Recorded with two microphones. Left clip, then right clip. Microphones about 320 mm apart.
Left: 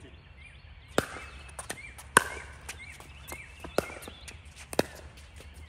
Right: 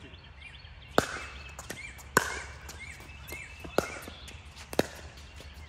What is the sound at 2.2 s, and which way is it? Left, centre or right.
Chop, left.